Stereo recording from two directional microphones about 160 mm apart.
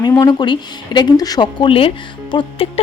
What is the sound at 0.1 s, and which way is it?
A woman's voice, 25° left (ahead or behind).